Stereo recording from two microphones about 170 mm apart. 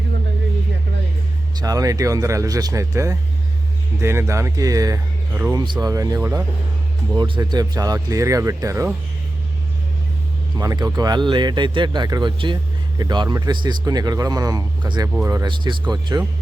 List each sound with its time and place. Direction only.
1.5 s speech: 20° right (ahead or behind)
10.6 s speech: 20° right (ahead or behind)